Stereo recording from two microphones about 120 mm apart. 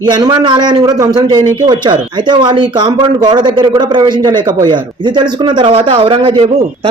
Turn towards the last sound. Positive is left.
turn(degrees=-45)  # may be behind; listen again after turning